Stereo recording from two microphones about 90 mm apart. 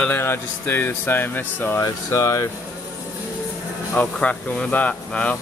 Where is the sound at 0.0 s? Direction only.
25° left (ahead or behind).